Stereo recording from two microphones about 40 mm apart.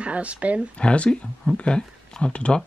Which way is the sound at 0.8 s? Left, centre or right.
Left.